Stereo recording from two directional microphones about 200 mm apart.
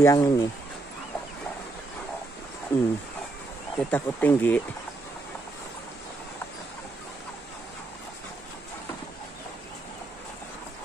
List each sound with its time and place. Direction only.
0.0 s speech: 15° left (ahead or behind)
2.7 s speech: 10° left (ahead or behind)